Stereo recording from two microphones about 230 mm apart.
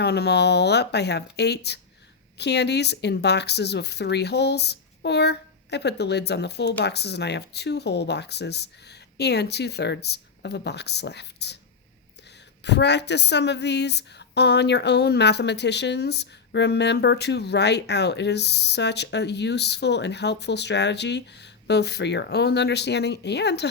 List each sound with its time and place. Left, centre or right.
0.0 s speech: left
12.6 s speech: left